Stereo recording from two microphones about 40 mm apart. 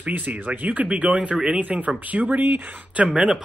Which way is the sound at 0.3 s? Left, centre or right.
Right.